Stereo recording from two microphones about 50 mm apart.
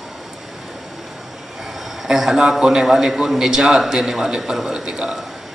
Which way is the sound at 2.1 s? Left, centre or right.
Centre.